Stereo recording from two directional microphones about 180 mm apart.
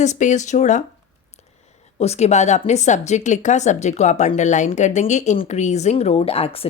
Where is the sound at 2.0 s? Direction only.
35° left (ahead or behind).